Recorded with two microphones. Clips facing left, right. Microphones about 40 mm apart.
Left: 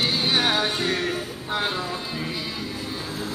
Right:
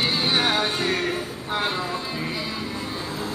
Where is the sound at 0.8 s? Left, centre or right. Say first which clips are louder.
Right 1 dB; right.